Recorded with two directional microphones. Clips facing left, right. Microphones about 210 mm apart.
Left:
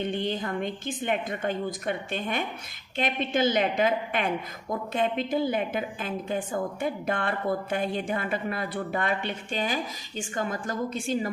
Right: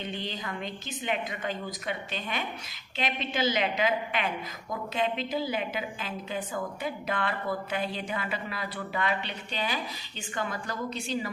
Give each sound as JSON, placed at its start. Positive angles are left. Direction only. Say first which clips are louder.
{"t": 0.0, "sound": "a woman's voice", "louder": "left 7 dB", "side_deg": 55}